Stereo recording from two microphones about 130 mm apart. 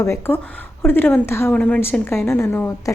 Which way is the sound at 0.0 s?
20° left (ahead or behind).